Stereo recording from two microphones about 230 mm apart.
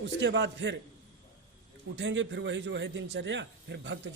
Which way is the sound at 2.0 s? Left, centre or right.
Right.